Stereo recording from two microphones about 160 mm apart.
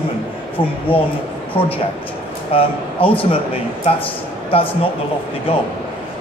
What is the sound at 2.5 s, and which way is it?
Speech, 35° left (ahead or behind).